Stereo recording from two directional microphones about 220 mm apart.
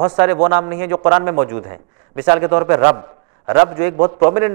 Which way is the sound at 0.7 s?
15° right (ahead or behind).